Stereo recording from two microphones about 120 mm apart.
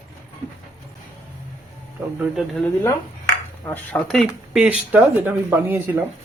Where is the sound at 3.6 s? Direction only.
15° left (ahead or behind); by 6.0 s 20° right (ahead or behind).